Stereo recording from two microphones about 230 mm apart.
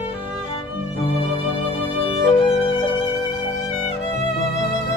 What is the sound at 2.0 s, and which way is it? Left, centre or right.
Violin, left.